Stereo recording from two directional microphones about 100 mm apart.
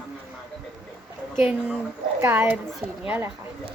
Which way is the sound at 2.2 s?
25° right (ahead or behind).